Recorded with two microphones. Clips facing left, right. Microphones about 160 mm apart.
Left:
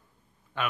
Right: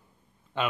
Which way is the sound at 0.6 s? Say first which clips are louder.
Right 3 dB; 20° right (ahead or behind).